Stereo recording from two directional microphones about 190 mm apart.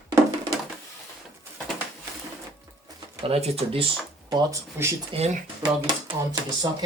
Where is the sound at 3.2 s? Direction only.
30° right (ahead or behind).